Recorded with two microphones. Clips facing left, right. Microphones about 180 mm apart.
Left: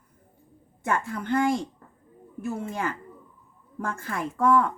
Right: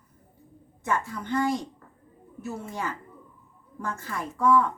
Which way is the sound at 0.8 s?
55° left (ahead or behind).